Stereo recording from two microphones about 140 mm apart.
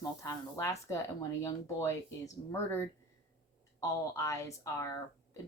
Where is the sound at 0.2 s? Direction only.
20° left (ahead or behind).